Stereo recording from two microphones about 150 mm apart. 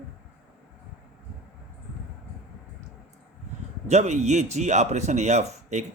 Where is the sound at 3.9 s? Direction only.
50° right (ahead or behind).